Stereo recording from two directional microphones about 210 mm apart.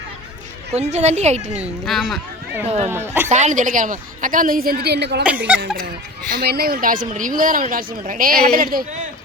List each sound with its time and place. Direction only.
0.7 s speech: 30° right (ahead or behind)
1.8 s speech: centre (ahead or behind)
2.6 s speech: 30° right (ahead or behind)
2.9 s speech: 10° right (ahead or behind)
3.2 s speech: 35° right (ahead or behind); by 5.2 s 50° right (ahead or behind)
6.3 s a man's voice: 45° right (ahead or behind)